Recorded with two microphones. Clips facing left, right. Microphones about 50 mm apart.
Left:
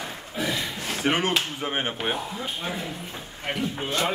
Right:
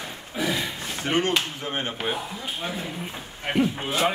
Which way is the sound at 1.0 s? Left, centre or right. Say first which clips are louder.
Even; left.